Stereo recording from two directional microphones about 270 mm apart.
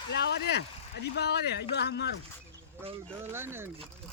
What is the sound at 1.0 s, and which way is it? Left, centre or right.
Speech, left.